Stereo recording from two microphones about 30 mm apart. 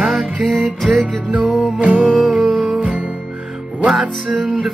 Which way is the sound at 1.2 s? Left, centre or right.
Right.